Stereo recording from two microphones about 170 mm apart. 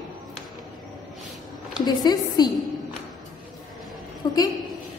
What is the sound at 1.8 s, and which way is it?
Speech, 25° left (ahead or behind).